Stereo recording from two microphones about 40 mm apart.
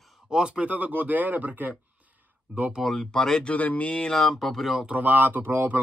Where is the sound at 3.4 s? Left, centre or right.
Left.